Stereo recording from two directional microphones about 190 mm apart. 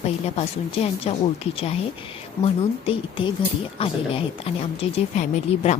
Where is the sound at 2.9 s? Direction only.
25° left (ahead or behind).